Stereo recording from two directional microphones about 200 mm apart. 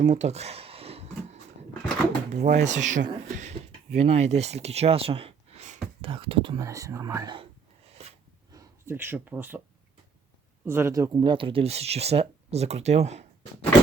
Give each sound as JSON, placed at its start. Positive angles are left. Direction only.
{"t": 0.0, "sound": "a sound", "side_deg": -35}
{"t": 2.3, "sound": "speech", "side_deg": -35}
{"t": 6.6, "sound": "speech", "side_deg": -15}
{"t": 8.5, "sound": "speech", "side_deg": -10}
{"t": 10.7, "sound": "speech", "side_deg": -15}